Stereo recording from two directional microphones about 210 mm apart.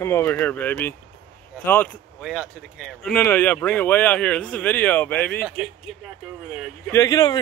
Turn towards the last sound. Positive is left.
turn(degrees=20)  # may be behind; listen again after turning